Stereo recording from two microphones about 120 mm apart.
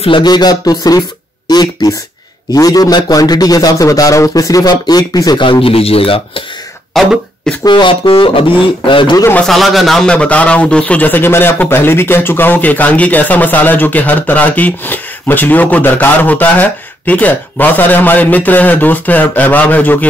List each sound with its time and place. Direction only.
0.0 s a man's voice: 40° left (ahead or behind)
6.9 s speech: 5° left (ahead or behind)
7.6 s speech: 40° left (ahead or behind)
9.5 s a man's voice: centre (ahead or behind)